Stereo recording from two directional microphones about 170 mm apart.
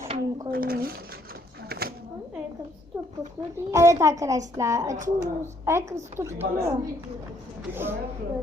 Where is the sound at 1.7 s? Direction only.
65° right (ahead or behind).